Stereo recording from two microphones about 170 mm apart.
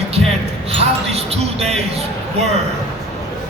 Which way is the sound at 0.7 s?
35° right (ahead or behind).